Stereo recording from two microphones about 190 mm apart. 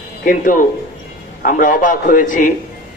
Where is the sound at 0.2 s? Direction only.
45° left (ahead or behind).